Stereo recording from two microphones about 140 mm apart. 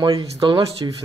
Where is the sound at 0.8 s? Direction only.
25° right (ahead or behind).